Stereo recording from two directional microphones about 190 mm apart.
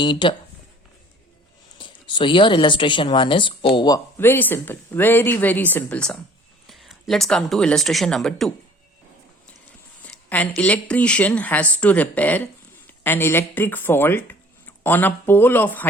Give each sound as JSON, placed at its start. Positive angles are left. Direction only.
{"t": 0.0, "sound": "speech", "side_deg": 25}
{"t": 1.8, "sound": "speech", "side_deg": 25}
{"t": 10.0, "sound": "speech", "side_deg": 10}